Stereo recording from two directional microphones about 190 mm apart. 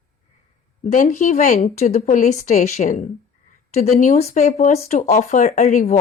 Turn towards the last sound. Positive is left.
turn(degrees=40)  # may be behind; listen again after turning